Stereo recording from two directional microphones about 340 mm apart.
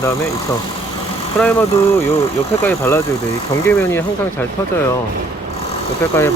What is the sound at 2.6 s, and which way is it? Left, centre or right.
Speech, centre.